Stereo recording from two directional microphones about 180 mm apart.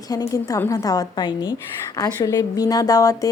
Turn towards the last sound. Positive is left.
turn(degrees=20)  # may be behind; listen again after turning